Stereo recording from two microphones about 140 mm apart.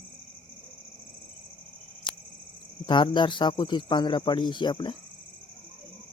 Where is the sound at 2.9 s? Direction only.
35° left (ahead or behind).